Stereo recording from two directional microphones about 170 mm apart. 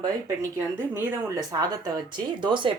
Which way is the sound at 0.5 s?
10° right (ahead or behind).